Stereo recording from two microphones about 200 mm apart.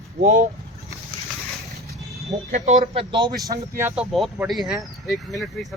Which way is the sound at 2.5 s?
35° right (ahead or behind).